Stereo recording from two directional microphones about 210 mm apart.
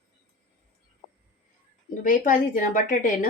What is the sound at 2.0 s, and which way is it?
Speech, 40° left (ahead or behind).